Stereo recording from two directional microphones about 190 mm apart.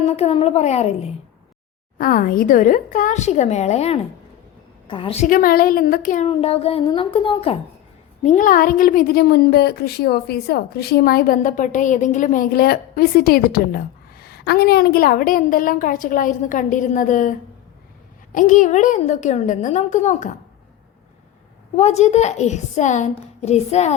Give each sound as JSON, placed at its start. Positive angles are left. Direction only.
{"t": 0.0, "sound": "a woman's voice", "side_deg": 35}
{"t": 2.0, "sound": "a woman's voice", "side_deg": 45}
{"t": 4.9, "sound": "a sound", "side_deg": 25}
{"t": 5.2, "sound": "a woman's voice", "side_deg": 45}
{"t": 6.2, "sound": "a sound", "side_deg": 30}
{"t": 8.2, "sound": "a woman's voice", "side_deg": 40}
{"t": 21.8, "sound": "a woman's voice", "side_deg": 35}